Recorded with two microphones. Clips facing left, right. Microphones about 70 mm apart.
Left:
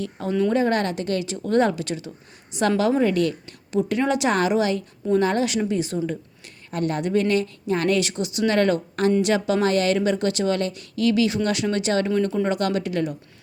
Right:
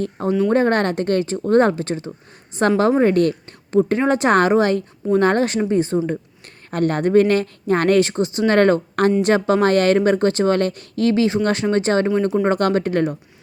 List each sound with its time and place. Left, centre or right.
0.3 s speech: centre
0.5 s speech: right
6.7 s speech: right
12.5 s speech: right